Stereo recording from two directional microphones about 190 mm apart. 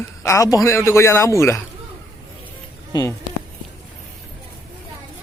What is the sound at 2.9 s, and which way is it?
Speech, 20° left (ahead or behind).